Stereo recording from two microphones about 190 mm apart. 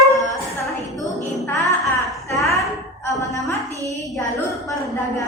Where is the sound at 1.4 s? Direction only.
15° left (ahead or behind).